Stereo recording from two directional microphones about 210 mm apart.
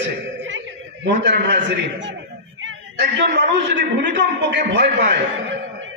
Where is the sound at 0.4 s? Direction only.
65° right (ahead or behind).